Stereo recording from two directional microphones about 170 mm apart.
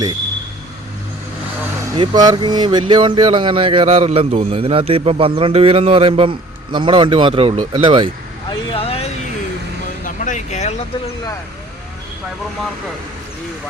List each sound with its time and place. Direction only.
2.0 s speech: 25° right (ahead or behind)
8.4 s a sound: 35° left (ahead or behind)
10.0 s vehicle: 45° left (ahead or behind)